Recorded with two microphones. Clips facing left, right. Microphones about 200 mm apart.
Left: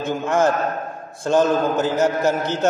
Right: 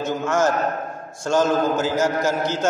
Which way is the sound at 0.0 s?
55° left (ahead or behind).